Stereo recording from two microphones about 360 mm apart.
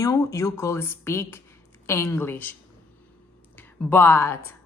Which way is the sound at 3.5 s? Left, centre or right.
Centre.